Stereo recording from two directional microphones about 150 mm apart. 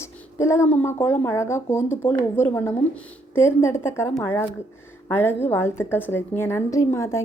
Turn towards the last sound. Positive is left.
turn(degrees=20)  # may be behind; listen again after turning